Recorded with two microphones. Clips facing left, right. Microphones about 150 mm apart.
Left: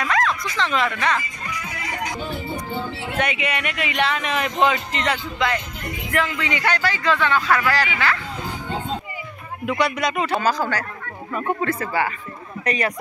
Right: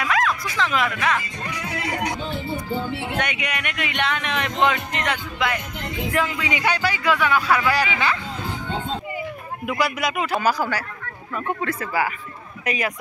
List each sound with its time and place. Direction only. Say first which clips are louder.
0.0 s speech: even; 5° right (ahead or behind)
1.5 s music: right 4 dB; 70° right (ahead or behind)
3.2 s speech: left 3 dB; centre (ahead or behind)
6.1 s speech: left 2 dB; 15° right (ahead or behind)
9.7 s a man's voice: left 2 dB; 5° right (ahead or behind)